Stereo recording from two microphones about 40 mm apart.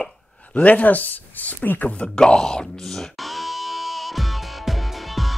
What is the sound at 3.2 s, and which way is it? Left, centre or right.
Music, centre.